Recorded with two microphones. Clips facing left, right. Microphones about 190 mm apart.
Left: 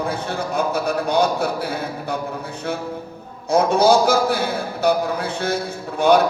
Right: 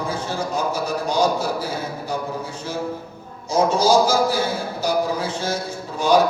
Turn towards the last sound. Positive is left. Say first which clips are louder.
# left 2 dB
turn(degrees=60)  # may be behind; listen again after turning